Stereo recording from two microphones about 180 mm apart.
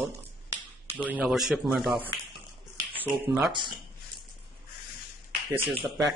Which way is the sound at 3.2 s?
5° right (ahead or behind).